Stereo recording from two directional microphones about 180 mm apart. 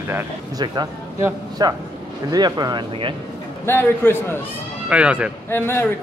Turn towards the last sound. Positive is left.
turn(degrees=10)  # may be behind; listen again after turning